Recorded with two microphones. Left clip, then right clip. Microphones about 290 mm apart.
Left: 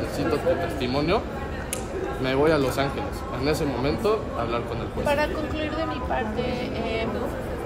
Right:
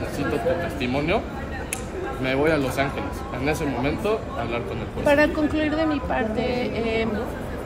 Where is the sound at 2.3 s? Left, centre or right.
Centre.